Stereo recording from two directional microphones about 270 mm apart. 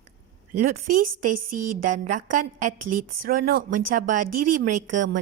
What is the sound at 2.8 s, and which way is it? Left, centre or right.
Speech, right.